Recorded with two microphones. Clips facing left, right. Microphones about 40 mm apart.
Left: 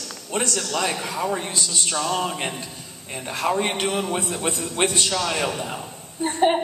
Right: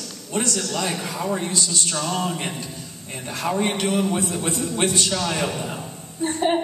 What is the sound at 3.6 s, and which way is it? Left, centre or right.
A man's voice, left.